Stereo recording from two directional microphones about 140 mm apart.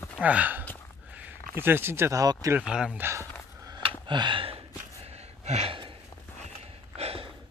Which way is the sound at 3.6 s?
30° right (ahead or behind).